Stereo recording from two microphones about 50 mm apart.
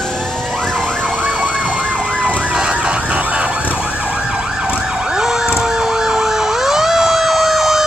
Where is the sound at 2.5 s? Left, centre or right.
Centre.